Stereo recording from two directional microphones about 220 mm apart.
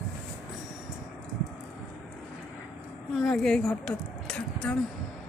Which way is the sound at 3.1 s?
Centre (ahead or behind).